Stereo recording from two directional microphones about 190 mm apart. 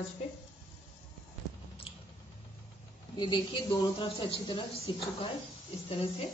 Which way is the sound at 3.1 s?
25° left (ahead or behind).